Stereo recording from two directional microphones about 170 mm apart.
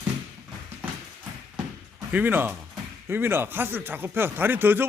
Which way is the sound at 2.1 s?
10° right (ahead or behind).